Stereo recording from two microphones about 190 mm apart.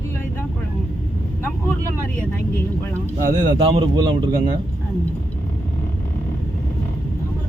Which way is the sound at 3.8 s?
25° right (ahead or behind).